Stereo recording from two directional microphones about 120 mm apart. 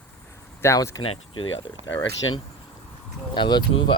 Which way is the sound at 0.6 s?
25° left (ahead or behind).